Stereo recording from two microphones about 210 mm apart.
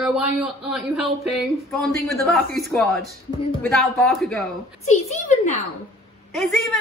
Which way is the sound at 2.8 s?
45° right (ahead or behind).